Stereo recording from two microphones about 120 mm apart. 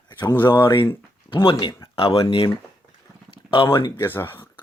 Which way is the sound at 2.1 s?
50° left (ahead or behind).